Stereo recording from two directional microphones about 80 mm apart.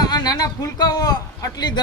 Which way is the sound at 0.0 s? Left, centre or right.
Left.